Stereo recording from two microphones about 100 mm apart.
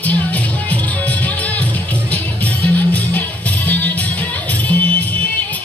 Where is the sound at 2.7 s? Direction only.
15° left (ahead or behind).